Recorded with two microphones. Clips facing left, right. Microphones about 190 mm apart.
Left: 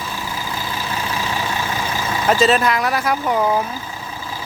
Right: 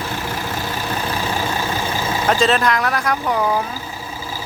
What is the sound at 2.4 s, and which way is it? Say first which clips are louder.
Speech: left 1 dB; 5° left (ahead or behind).